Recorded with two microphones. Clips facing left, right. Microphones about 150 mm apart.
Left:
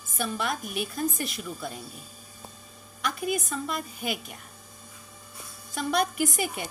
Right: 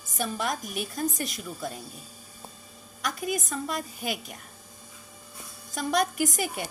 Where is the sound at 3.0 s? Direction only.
40° right (ahead or behind).